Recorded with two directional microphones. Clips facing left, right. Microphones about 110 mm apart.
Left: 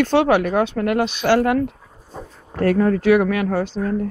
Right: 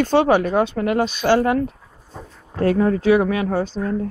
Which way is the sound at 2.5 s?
10° right (ahead or behind).